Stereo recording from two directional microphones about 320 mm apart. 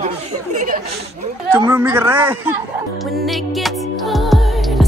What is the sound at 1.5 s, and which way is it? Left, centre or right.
Speech, centre.